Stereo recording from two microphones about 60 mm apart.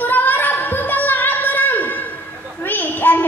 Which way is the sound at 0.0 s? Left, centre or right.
Left.